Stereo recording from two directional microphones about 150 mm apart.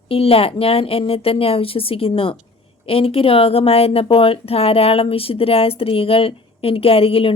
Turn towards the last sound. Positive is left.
turn(degrees=40)  # may be behind; listen again after turning